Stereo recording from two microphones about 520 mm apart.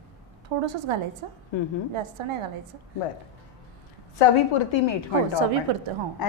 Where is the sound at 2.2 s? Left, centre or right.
Right.